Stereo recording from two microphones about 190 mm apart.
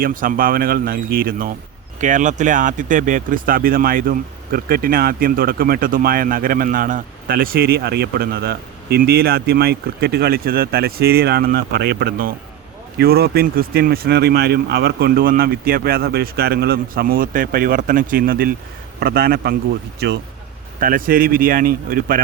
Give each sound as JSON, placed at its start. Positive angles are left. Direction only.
{"t": 0.0, "sound": "a man's voice", "side_deg": -45}
{"t": 20.7, "sound": "speech", "side_deg": -45}